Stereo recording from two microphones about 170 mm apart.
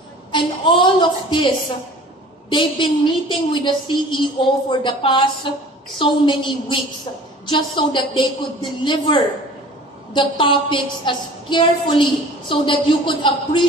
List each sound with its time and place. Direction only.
0.3 s a woman's voice: 30° left (ahead or behind)
2.5 s a woman's voice: 30° left (ahead or behind)